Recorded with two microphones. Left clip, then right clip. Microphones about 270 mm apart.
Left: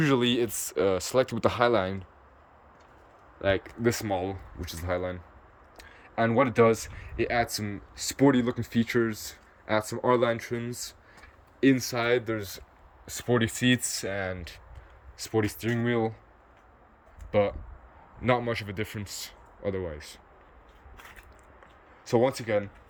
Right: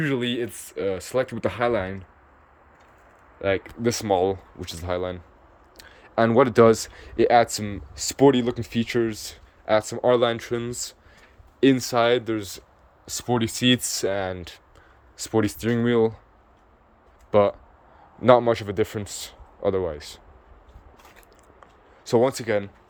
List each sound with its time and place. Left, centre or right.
0.0 s speech: centre
3.3 s a man's voice: centre
17.3 s a man's voice: centre
22.0 s a man's voice: centre